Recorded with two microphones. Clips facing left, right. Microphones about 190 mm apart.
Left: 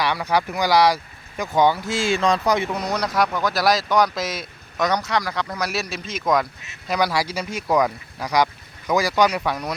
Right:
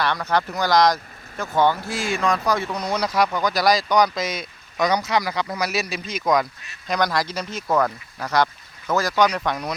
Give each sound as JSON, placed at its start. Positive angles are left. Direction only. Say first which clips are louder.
{"t": 0.0, "sound": "speech", "louder": "left 1 dB", "side_deg": 10}
{"t": 1.9, "sound": "speech", "louder": "left 3 dB", "side_deg": 30}
{"t": 2.9, "sound": "speech", "louder": "right 2 dB", "side_deg": 0}